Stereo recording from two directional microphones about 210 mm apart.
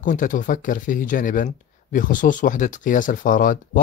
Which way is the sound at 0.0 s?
40° left (ahead or behind).